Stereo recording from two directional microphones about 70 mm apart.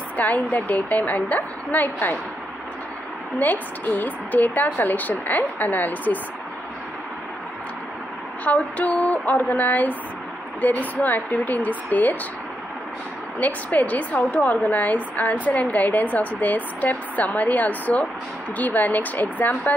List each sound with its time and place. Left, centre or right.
0.2 s speech: left
3.3 s speech: left
8.5 s speech: left
13.4 s speech: left